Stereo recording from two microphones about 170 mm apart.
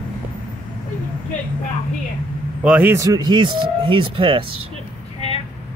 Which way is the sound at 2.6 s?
10° right (ahead or behind).